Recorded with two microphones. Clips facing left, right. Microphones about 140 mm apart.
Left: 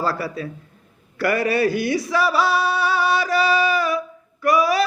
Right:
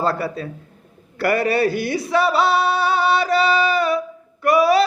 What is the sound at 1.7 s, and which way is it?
Speech, 60° right (ahead or behind).